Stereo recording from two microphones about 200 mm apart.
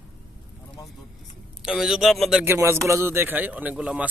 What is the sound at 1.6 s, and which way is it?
A man's voice, 5° right (ahead or behind).